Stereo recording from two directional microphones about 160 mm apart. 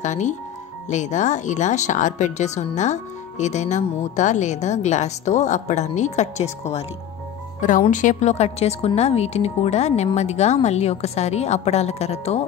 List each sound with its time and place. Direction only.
0.0 s speech: 50° left (ahead or behind)
7.9 s speech: 50° left (ahead or behind)